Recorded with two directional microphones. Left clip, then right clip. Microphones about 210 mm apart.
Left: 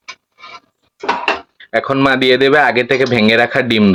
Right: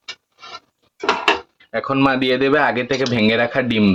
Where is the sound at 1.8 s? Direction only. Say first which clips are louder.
Left 5 dB; 30° left (ahead or behind).